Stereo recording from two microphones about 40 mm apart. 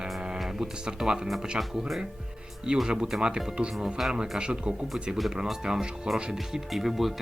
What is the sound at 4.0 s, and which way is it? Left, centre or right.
Speech, centre.